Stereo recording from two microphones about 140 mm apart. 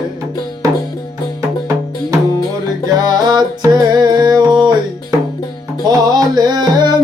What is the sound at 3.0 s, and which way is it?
Music, 30° right (ahead or behind).